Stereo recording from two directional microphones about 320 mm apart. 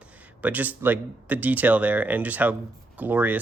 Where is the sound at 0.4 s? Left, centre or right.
Centre.